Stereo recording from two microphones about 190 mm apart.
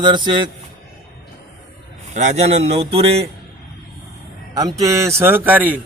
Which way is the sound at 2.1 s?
35° right (ahead or behind).